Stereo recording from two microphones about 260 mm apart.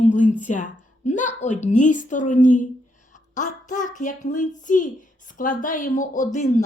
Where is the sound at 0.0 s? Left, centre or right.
Left.